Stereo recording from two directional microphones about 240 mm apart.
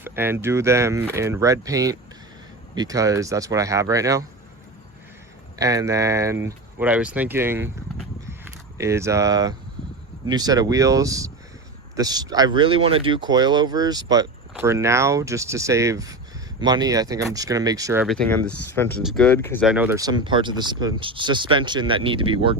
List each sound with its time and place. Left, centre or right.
0.0 s speech: centre
5.5 s speech: centre
8.8 s speech: centre
18.0 s speech: centre
19.6 s speech: centre